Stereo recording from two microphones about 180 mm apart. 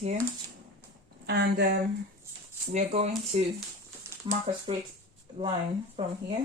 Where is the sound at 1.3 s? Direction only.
65° right (ahead or behind).